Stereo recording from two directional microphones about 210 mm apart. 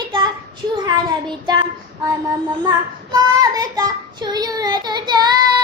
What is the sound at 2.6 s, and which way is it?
Child singing, 15° right (ahead or behind).